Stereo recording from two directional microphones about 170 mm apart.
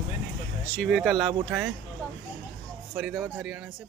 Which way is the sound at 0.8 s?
Centre (ahead or behind).